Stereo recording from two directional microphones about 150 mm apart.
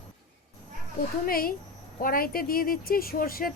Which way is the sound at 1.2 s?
75° left (ahead or behind).